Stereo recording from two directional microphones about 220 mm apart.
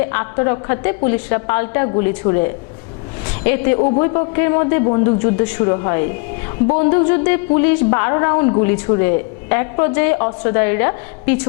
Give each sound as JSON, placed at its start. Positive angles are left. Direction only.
{"t": 0.1, "sound": "a woman's voice", "side_deg": 20}